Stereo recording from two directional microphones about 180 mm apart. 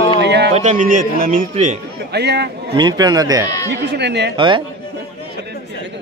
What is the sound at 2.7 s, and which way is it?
Speech, 25° right (ahead or behind).